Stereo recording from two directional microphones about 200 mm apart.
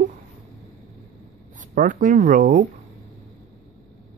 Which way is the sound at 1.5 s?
40° right (ahead or behind).